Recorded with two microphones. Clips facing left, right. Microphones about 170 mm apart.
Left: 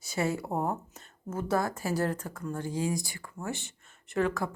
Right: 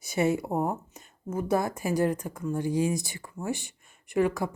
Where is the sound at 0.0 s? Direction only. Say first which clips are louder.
Right 5 dB; 20° right (ahead or behind).